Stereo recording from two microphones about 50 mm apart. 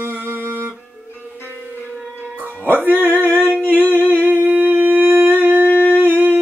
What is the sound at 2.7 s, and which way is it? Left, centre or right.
Music, right.